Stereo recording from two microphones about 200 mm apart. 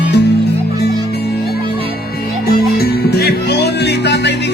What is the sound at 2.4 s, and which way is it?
Music, 50° left (ahead or behind).